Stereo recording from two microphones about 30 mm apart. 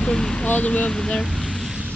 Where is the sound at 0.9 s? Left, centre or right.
Left.